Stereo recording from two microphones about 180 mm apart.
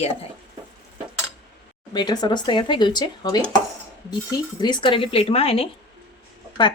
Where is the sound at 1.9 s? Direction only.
25° left (ahead or behind).